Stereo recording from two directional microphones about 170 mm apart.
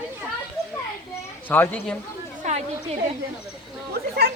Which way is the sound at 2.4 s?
45° right (ahead or behind).